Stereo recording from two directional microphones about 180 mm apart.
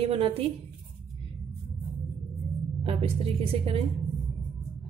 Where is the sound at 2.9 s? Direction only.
30° right (ahead or behind).